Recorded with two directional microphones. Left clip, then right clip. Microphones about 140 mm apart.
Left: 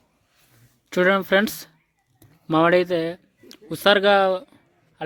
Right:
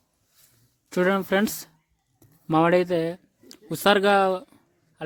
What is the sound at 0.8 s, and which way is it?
Speech, 25° right (ahead or behind).